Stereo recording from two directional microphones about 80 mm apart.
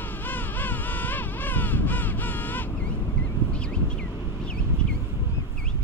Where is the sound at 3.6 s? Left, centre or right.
Centre.